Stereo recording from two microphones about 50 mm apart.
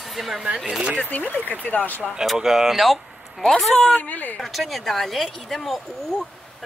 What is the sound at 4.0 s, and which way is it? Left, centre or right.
Speech, left.